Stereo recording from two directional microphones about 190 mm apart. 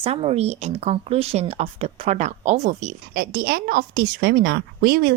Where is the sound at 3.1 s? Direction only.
55° right (ahead or behind).